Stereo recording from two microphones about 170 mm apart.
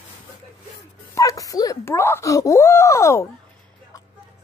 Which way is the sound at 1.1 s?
20° left (ahead or behind).